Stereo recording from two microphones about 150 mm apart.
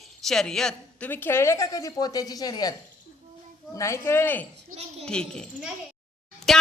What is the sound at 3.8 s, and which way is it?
A man's voice, 20° left (ahead or behind).